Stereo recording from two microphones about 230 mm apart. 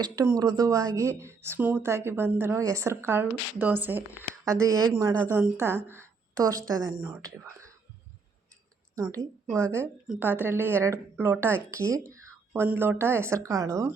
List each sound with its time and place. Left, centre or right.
0.0 s a woman's voice: centre
9.0 s a woman's voice: centre